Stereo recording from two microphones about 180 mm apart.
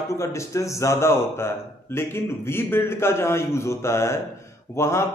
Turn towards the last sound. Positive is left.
turn(degrees=15)  # may be behind; listen again after turning